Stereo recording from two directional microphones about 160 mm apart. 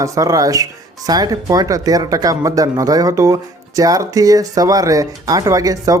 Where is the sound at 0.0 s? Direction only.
20° right (ahead or behind).